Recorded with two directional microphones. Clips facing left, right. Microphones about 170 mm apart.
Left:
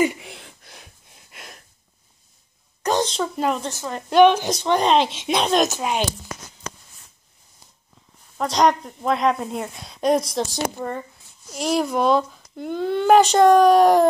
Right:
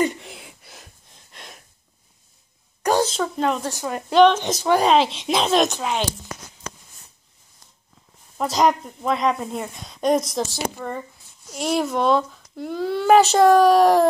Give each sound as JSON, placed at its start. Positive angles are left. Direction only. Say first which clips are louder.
{"t": 0.0, "sound": "a sound", "louder": "left 1 dB", "side_deg": 5}
{"t": 2.8, "sound": "a sound", "louder": "right 2 dB", "side_deg": -10}
{"t": 3.3, "sound": "speech", "louder": "even", "side_deg": 5}
{"t": 3.6, "sound": "speech", "louder": "right 2 dB", "side_deg": -10}
{"t": 4.1, "sound": "speech", "louder": "left 1 dB", "side_deg": 5}
{"t": 4.5, "sound": "speech", "louder": "right 1 dB", "side_deg": -5}
{"t": 5.8, "sound": "speech", "louder": "left 1 dB", "side_deg": 15}
{"t": 8.4, "sound": "speech", "louder": "left 1 dB", "side_deg": -5}
{"t": 10.8, "sound": "speech", "louder": "left 2 dB", "side_deg": 15}
{"t": 11.5, "sound": "speech", "louder": "left 1 dB", "side_deg": 0}